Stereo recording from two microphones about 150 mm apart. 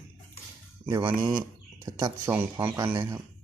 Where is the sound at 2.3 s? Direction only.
15° right (ahead or behind).